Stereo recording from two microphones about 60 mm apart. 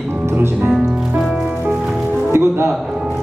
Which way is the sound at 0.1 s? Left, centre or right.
Right.